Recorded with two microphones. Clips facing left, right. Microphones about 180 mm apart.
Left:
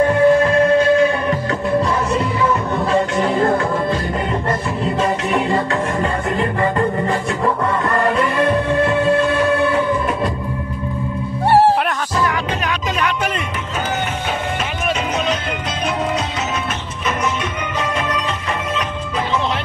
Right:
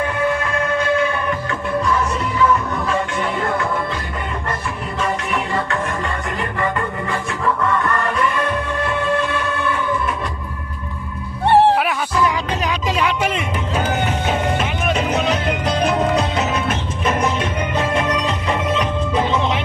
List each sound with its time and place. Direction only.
0.0 s music: 35° left (ahead or behind)
5.0 s music: 35° left (ahead or behind)